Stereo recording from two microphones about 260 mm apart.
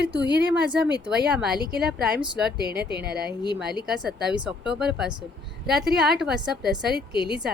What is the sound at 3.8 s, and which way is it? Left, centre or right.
Speech, centre.